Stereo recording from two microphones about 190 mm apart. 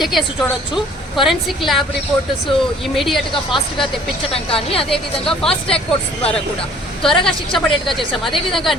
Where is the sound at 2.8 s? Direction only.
Centre (ahead or behind).